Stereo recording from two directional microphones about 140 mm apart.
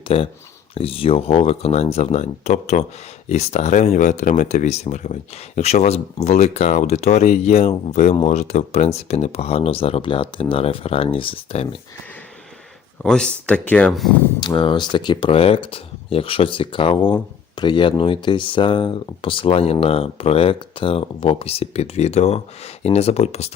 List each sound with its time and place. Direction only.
0.1 s speech: 45° left (ahead or behind)
13.0 s speech: 5° left (ahead or behind)
14.4 s speech: 35° left (ahead or behind); by 23.5 s 50° left (ahead or behind)